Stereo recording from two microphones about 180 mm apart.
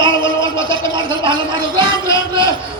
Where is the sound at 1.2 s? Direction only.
25° right (ahead or behind).